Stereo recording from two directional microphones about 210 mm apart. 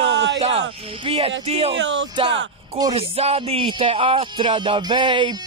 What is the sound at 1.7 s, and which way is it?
Speech, 55° right (ahead or behind).